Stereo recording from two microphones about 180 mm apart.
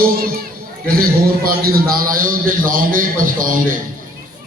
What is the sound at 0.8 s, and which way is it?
A man's voice, 55° right (ahead or behind).